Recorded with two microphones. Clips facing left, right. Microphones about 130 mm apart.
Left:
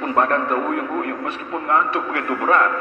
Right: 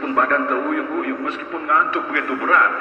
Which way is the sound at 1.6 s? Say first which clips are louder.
Even; 25° left (ahead or behind).